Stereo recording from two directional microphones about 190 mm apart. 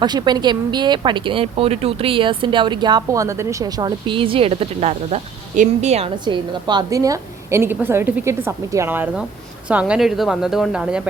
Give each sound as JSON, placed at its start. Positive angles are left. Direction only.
{"t": 0.0, "sound": "speech", "side_deg": -20}
{"t": 6.2, "sound": "a woman's voice", "side_deg": -25}